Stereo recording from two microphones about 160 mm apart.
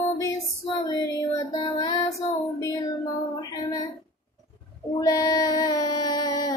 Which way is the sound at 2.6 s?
25° left (ahead or behind).